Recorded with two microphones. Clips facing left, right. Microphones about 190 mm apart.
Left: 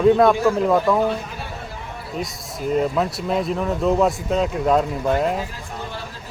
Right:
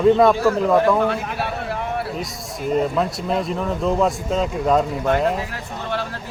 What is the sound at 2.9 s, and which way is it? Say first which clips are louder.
Speech: even; centre (ahead or behind).